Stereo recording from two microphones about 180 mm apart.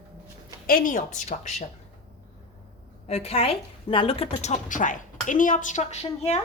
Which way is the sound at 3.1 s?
35° left (ahead or behind).